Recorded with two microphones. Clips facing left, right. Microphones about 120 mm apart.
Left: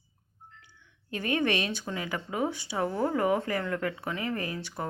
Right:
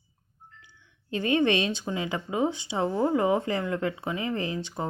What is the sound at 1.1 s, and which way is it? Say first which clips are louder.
Speech: right 4 dB; 25° right (ahead or behind).